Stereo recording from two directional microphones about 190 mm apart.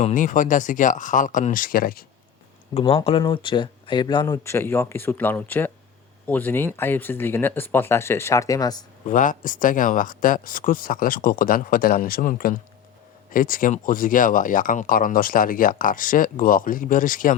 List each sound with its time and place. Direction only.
0.0 s speech: 40° left (ahead or behind)
2.9 s speech: 30° left (ahead or behind)
9.0 s speech: 45° left (ahead or behind)